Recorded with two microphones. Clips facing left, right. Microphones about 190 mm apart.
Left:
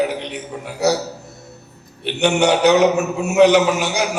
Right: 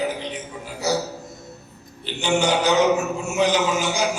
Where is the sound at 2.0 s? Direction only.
65° left (ahead or behind).